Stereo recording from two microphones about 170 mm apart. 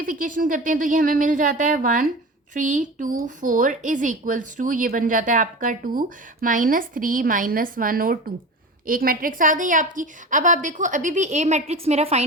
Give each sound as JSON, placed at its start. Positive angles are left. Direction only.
{"t": 0.0, "sound": "a woman's voice", "side_deg": -55}